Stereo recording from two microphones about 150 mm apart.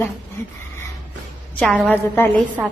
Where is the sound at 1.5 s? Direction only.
10° left (ahead or behind).